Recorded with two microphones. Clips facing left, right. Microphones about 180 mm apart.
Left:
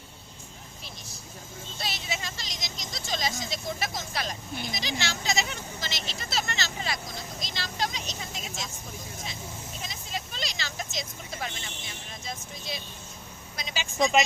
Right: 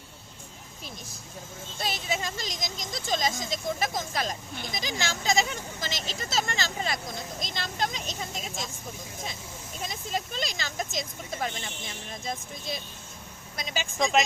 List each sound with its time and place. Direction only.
1.8 s speech: 45° right (ahead or behind)
7.4 s vehicle: 50° right (ahead or behind)
9.8 s vehicle: 45° right (ahead or behind)
12.2 s a woman's voice: 50° right (ahead or behind)
14.0 s a woman's voice: centre (ahead or behind)